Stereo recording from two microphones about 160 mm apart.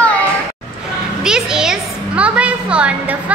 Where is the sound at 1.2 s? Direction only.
5° right (ahead or behind).